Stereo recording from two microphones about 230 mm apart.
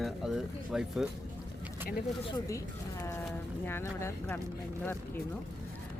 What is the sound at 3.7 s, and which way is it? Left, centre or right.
Speech, centre.